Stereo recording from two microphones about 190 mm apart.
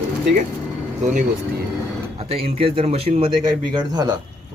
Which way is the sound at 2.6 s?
30° right (ahead or behind).